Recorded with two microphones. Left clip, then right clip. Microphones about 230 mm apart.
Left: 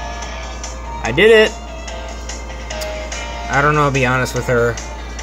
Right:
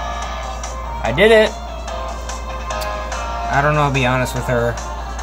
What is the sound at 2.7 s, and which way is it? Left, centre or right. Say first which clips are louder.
Music: right 1 dB; centre.